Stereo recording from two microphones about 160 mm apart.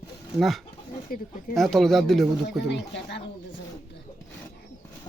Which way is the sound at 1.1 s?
65° left (ahead or behind).